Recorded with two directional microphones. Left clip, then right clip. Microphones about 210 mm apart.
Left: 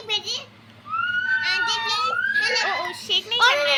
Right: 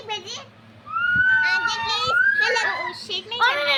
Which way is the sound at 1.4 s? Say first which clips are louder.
Right 1 dB; 45° right (ahead or behind).